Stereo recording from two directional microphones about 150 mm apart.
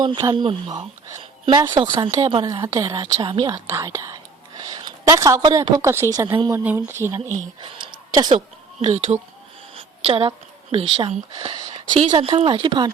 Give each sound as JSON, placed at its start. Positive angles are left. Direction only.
{"t": 0.0, "sound": "a woman's voice", "side_deg": -25}
{"t": 7.6, "sound": "a sound", "side_deg": -35}
{"t": 8.8, "sound": "speech", "side_deg": -45}